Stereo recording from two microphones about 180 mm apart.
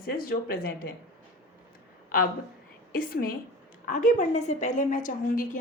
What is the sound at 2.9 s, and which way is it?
A woman's voice, 55° left (ahead or behind).